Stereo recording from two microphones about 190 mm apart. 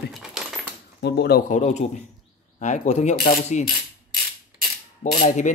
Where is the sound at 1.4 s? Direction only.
40° left (ahead or behind).